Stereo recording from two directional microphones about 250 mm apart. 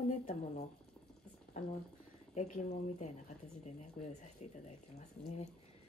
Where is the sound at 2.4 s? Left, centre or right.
Left.